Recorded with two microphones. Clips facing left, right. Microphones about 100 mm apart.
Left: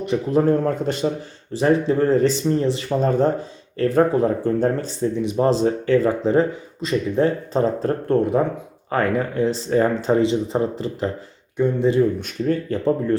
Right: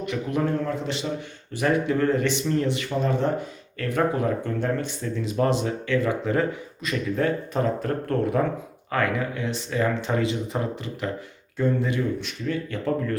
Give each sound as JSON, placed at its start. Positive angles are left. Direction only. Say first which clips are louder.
{"t": 0.0, "sound": "speech", "louder": "left 7 dB", "side_deg": 30}
{"t": 1.5, "sound": "speech", "louder": "left 5 dB", "side_deg": 30}
{"t": 5.1, "sound": "speech", "louder": "left 2 dB", "side_deg": 20}
{"t": 5.5, "sound": "speech", "louder": "left 7 dB", "side_deg": 35}
{"t": 8.9, "sound": "speech", "louder": "left 4 dB", "side_deg": 35}
{"t": 11.5, "sound": "speech", "louder": "left 4 dB", "side_deg": 20}
{"t": 12.2, "sound": "speech", "louder": "left 6 dB", "side_deg": 40}